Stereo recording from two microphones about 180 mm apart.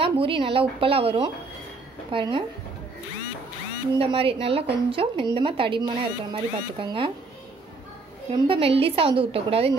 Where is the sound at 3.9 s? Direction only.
30° right (ahead or behind).